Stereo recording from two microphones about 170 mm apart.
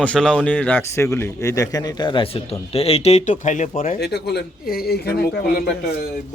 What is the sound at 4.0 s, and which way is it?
Speech, 70° left (ahead or behind).